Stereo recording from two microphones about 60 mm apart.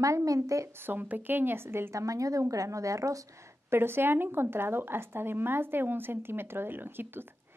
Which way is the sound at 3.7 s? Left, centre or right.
Right.